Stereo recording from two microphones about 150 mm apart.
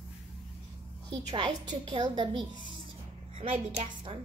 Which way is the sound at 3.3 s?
40° right (ahead or behind).